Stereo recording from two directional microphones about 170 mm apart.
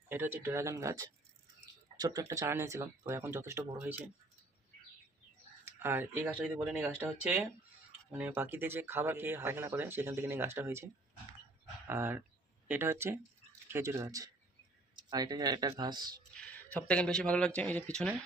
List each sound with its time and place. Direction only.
0.1 s speech: 15° right (ahead or behind)
5.6 s speech: 15° right (ahead or behind)
11.9 s speech: 10° right (ahead or behind)
16.3 s speech: 5° left (ahead or behind)